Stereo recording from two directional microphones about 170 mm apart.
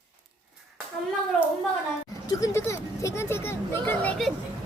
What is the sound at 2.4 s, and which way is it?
Speech, 15° left (ahead or behind).